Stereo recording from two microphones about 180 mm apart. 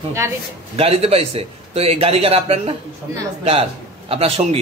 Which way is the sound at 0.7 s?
35° right (ahead or behind).